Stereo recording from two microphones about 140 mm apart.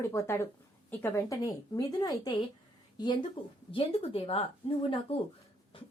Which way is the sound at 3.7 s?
40° left (ahead or behind).